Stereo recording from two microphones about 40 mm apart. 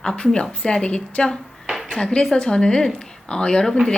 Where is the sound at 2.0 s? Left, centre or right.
Centre.